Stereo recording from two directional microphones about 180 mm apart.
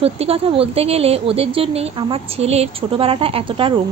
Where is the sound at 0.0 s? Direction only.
35° right (ahead or behind).